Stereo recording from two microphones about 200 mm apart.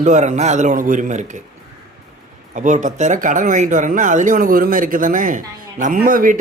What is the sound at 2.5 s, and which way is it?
Speech, 40° right (ahead or behind).